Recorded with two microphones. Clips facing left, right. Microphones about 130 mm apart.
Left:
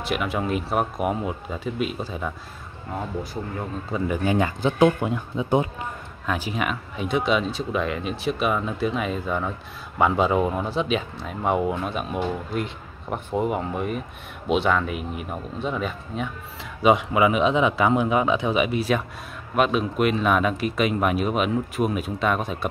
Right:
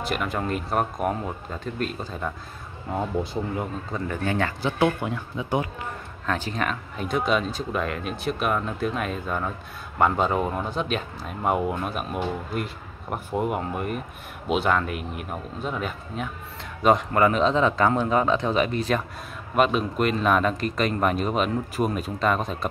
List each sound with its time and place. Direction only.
0.0 s speech: centre (ahead or behind)
3.9 s speech: 15° left (ahead or behind)
6.2 s speech: 10° left (ahead or behind)